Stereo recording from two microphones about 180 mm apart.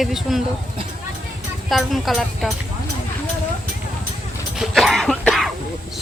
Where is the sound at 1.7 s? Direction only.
Centre (ahead or behind).